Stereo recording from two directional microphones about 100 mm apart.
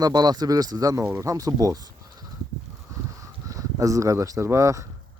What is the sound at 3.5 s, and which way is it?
Speech, 35° right (ahead or behind).